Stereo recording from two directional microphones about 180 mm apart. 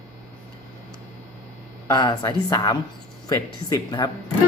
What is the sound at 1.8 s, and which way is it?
Speech, 20° left (ahead or behind).